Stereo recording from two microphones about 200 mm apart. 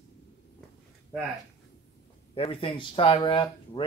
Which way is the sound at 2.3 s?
30° left (ahead or behind).